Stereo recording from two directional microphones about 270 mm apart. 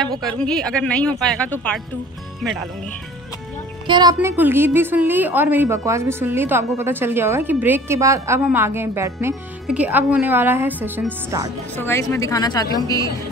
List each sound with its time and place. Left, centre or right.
0.2 s speech: centre
3.8 s a woman's voice: centre
11.7 s a woman's voice: centre